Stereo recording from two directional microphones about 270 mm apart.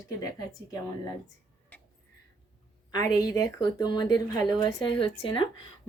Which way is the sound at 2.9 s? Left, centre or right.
Centre.